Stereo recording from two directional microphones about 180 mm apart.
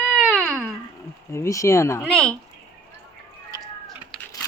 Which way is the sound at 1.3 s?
15° left (ahead or behind).